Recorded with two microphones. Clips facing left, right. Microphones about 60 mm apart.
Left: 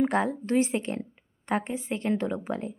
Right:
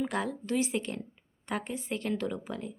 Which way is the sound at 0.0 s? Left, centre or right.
Left.